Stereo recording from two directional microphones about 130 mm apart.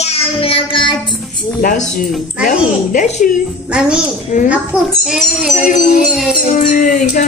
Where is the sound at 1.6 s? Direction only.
90° left.